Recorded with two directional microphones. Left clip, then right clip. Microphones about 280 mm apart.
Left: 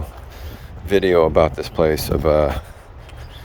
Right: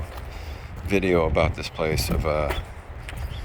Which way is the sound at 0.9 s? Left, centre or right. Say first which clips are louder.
Left 7 dB; left.